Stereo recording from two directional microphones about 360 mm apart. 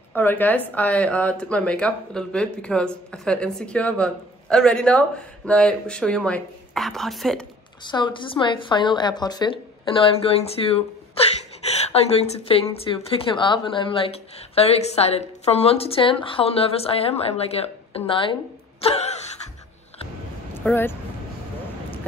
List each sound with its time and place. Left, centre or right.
0.1 s speech: centre
7.8 s a woman's voice: centre
20.6 s speech: centre